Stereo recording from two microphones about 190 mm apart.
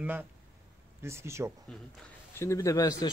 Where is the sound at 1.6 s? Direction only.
10° left (ahead or behind).